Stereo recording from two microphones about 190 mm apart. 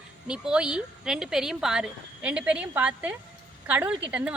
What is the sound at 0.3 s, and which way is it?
A woman's voice, 5° right (ahead or behind).